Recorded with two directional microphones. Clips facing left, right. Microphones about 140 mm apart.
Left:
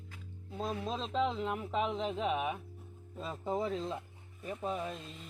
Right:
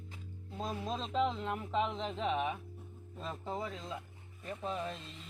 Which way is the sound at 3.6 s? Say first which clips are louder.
Left 6 dB; 25° left (ahead or behind).